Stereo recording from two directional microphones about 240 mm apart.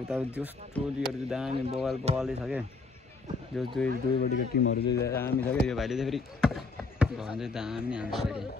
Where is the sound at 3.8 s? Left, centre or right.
Centre.